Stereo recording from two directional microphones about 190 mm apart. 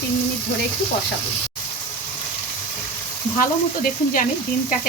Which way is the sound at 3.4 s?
45° left (ahead or behind).